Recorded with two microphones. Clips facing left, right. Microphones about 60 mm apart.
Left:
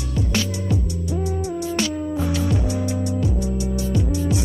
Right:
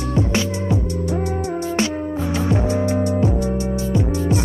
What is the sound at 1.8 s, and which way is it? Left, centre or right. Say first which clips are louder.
Music: right 2 dB; right.